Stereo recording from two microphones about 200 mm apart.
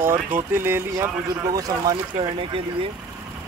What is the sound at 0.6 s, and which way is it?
Speech, 10° right (ahead or behind).